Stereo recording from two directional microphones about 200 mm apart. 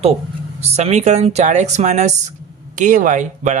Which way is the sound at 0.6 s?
30° right (ahead or behind).